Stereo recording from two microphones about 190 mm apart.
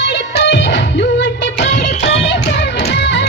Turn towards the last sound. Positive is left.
turn(degrees=65)  # may be behind; listen again after turning